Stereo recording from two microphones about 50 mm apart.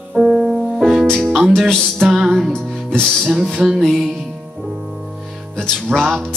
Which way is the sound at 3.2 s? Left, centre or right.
Centre.